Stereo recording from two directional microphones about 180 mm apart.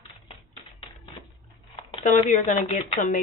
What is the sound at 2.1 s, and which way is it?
Speech, 45° left (ahead or behind).